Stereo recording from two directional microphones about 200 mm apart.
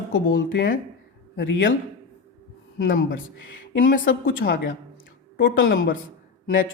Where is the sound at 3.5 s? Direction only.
70° left (ahead or behind).